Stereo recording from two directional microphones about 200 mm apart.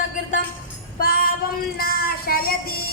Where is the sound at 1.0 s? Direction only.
45° left (ahead or behind).